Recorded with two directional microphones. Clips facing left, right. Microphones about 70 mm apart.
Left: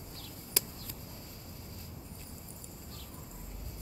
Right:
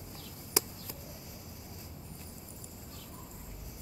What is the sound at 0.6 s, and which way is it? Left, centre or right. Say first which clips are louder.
Chop: right 6 dB; centre.